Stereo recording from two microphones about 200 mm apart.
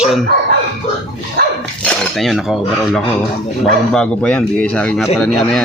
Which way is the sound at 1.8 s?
5° left (ahead or behind).